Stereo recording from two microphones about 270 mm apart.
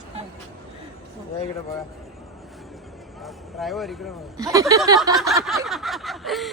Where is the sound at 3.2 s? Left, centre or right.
Centre.